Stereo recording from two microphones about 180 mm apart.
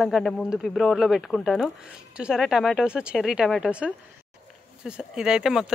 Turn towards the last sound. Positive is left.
turn(degrees=-5)  # may be behind; listen again after turning